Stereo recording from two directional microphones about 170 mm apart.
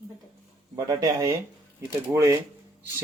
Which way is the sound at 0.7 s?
20° right (ahead or behind).